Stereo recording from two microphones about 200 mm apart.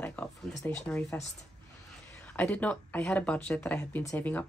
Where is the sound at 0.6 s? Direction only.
10° left (ahead or behind).